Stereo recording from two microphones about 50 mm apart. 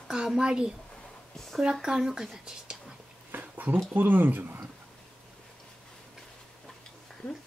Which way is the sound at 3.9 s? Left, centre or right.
Right.